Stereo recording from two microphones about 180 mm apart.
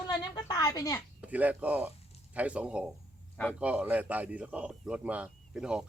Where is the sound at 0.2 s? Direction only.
20° left (ahead or behind).